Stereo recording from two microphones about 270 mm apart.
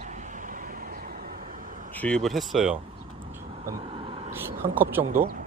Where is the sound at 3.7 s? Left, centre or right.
Right.